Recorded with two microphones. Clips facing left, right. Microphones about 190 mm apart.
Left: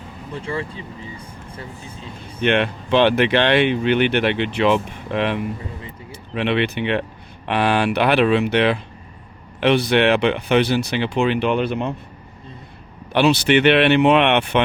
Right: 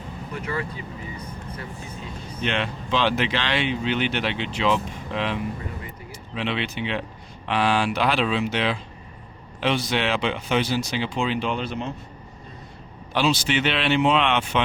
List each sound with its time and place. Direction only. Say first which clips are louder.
0.3 s speech: left 3 dB; 30° left (ahead or behind)
2.4 s speech: left 8 dB; 60° left (ahead or behind)
13.1 s speech: left 7 dB; 65° left (ahead or behind)